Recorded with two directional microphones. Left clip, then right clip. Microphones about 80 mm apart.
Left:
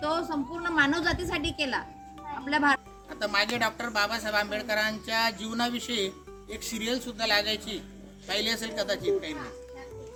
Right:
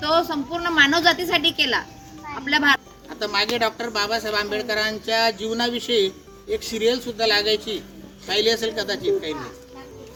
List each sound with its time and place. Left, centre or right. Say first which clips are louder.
0.0 s a woman's voice: right 9 dB; left
3.1 s speech: right 5 dB; left
3.8 s a sound: right 5 dB; left
8.3 s a man's voice: right 9 dB; left